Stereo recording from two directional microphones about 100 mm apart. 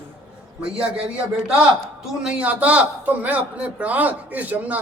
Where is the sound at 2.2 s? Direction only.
10° right (ahead or behind).